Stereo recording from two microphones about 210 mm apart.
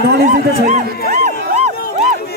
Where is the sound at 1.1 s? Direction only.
35° right (ahead or behind).